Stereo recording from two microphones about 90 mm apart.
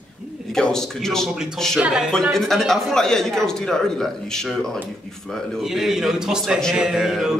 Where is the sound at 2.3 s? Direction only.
5° left (ahead or behind).